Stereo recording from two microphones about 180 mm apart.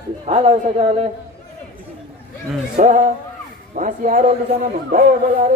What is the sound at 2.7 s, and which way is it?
A man's voice, 45° right (ahead or behind).